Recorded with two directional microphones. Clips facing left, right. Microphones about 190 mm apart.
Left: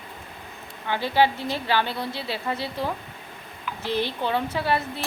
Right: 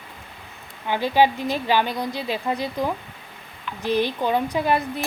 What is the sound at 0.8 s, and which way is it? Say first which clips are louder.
A woman's voice: right 3 dB; 15° right (ahead or behind).